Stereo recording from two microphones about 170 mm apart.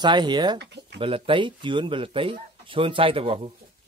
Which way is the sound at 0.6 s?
90° right.